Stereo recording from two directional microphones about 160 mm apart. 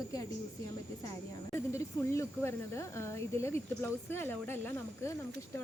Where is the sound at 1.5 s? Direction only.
15° left (ahead or behind).